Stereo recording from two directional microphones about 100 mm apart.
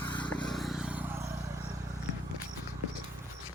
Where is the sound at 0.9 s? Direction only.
20° right (ahead or behind).